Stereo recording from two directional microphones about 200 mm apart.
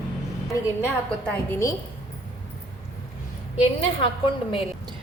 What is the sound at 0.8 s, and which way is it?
Speech, 10° left (ahead or behind).